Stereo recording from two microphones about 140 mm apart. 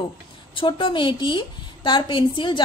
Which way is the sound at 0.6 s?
40° left (ahead or behind).